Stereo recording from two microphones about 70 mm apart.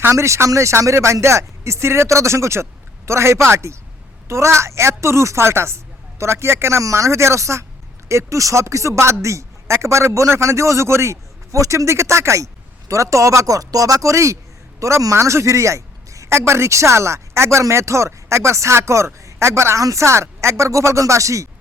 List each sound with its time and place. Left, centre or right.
0.1 s a woman's voice: right